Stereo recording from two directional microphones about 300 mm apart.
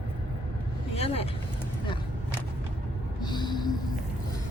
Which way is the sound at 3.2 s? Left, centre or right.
Centre.